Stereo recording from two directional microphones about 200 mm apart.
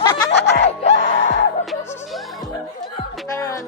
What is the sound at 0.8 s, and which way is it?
Music, 35° left (ahead or behind).